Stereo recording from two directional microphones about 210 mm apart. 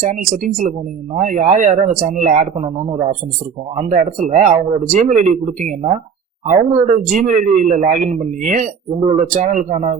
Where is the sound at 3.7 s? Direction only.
35° right (ahead or behind).